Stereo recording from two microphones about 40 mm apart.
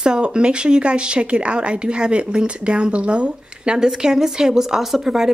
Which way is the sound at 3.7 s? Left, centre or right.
Centre.